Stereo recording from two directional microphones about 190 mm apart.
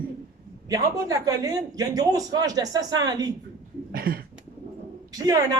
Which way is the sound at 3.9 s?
50° right (ahead or behind).